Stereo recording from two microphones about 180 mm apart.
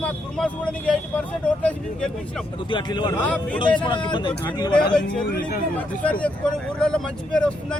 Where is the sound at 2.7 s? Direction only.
25° left (ahead or behind).